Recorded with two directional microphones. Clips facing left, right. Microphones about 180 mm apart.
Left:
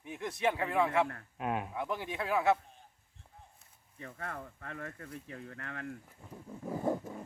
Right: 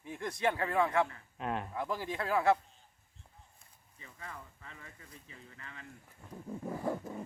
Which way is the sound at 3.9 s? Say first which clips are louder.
Left 6 dB; 60° left (ahead or behind).